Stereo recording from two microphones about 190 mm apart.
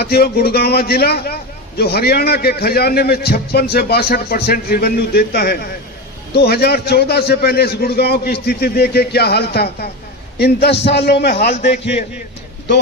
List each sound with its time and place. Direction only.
0.0 s a man's voice: 55° left (ahead or behind)